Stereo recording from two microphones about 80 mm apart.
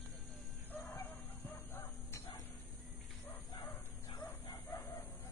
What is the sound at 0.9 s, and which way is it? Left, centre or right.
Bow-wow, left.